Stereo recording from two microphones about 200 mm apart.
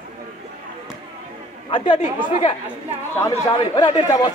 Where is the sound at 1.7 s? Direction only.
25° left (ahead or behind).